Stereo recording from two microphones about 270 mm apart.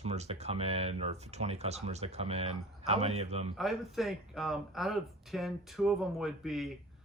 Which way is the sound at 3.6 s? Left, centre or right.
Centre.